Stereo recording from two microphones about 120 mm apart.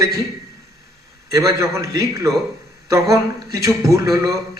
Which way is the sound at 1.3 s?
25° right (ahead or behind).